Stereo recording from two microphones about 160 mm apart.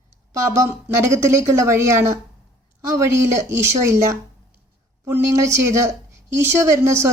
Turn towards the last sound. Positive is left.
turn(degrees=-20)  # may be behind; listen again after turning